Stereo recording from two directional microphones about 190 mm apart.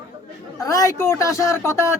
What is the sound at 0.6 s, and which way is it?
Speech, 15° left (ahead or behind).